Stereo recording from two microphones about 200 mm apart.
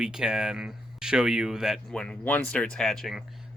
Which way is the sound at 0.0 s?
5° right (ahead or behind).